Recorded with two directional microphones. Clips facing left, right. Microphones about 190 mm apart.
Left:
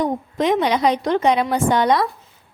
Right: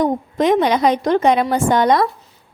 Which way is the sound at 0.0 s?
45° right (ahead or behind).